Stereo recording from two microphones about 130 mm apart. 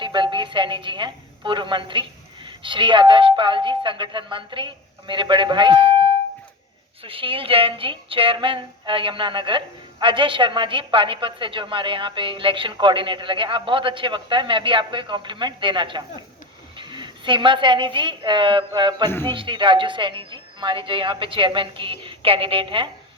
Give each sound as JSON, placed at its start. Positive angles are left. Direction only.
{"t": 0.0, "sound": "a woman's voice", "side_deg": -35}
{"t": 7.0, "sound": "a woman's voice", "side_deg": -45}